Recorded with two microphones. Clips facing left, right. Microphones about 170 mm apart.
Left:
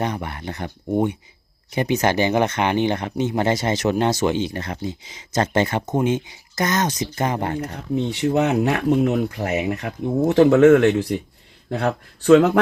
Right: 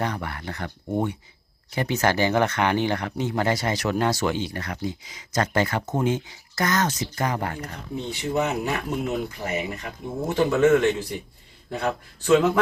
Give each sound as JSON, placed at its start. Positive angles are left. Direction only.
{"t": 0.0, "sound": "speech", "side_deg": 20}
{"t": 7.9, "sound": "speech", "side_deg": 65}